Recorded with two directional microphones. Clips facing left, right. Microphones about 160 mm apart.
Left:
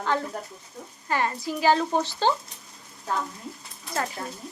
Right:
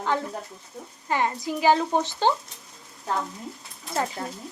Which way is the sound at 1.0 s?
20° right (ahead or behind).